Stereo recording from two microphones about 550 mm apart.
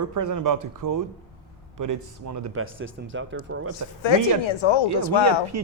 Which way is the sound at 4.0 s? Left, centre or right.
Left.